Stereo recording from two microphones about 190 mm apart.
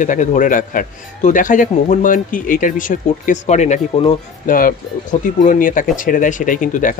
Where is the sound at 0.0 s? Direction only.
40° left (ahead or behind).